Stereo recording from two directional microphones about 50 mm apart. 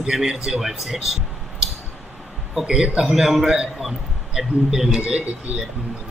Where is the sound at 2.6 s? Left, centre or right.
Centre.